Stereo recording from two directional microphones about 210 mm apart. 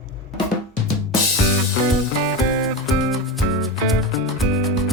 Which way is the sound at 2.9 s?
Centre (ahead or behind).